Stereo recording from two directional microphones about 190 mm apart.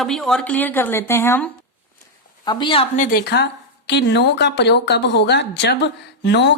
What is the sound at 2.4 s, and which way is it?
Speech, 25° left (ahead or behind).